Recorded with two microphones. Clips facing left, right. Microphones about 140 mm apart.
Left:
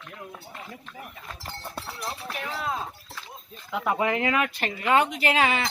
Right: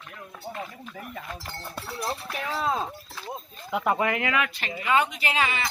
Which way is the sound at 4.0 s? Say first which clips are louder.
Left 1 dB; 30° left (ahead or behind).